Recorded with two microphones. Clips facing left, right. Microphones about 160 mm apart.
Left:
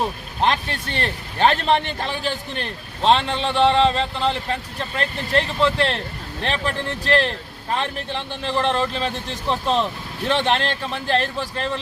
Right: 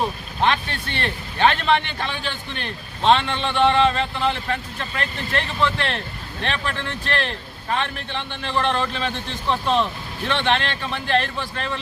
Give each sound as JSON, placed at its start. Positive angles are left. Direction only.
{"t": 0.4, "sound": "a man's voice", "side_deg": 40}